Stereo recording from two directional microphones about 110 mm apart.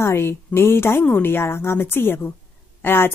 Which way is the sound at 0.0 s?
25° left (ahead or behind).